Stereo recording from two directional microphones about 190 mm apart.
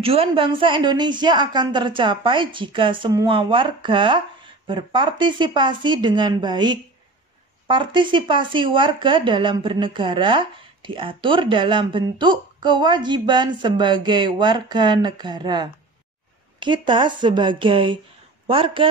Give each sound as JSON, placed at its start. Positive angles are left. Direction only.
{"t": 0.0, "sound": "speech", "side_deg": -30}